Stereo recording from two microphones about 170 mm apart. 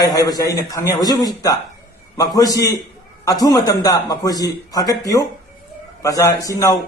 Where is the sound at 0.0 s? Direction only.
20° left (ahead or behind).